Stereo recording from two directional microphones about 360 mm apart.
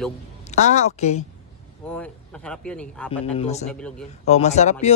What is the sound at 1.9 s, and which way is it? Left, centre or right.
Speech, centre.